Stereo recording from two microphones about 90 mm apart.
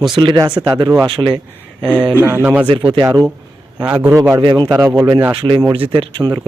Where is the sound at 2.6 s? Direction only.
70° right (ahead or behind).